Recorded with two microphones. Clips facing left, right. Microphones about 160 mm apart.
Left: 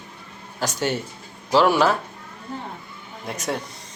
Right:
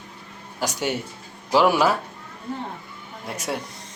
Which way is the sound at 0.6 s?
10° right (ahead or behind).